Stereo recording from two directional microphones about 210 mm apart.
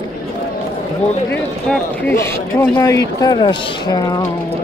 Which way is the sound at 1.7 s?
10° left (ahead or behind).